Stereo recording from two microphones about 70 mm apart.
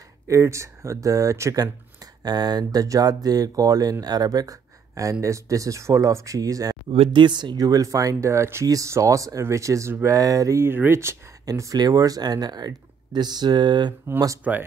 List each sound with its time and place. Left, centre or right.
0.3 s speech: right
2.2 s speech: right
7.2 s speech: right
8.6 s speech: right
10.6 s speech: right
11.5 s speech: right
14.5 s speech: centre